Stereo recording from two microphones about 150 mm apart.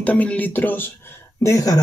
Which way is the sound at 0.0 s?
10° left (ahead or behind).